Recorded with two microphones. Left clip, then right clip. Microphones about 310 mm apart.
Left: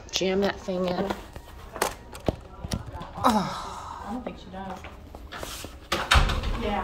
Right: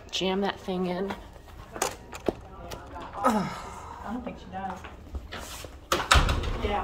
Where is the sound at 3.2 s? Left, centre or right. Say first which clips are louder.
Left 3 dB; centre.